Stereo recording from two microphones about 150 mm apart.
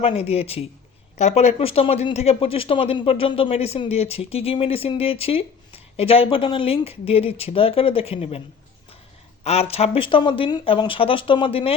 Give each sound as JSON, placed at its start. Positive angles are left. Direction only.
{"t": 0.0, "sound": "speech", "side_deg": 45}
{"t": 9.4, "sound": "speech", "side_deg": 45}